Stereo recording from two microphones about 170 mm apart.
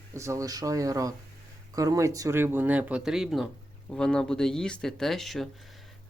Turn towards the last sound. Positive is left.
turn(degrees=0)  # may be behind; listen again after turning